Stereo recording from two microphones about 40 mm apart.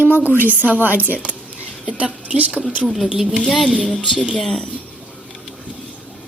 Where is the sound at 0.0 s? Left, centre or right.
Right.